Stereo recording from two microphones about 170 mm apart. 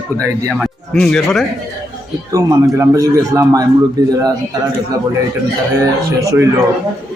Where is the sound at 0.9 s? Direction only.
5° left (ahead or behind).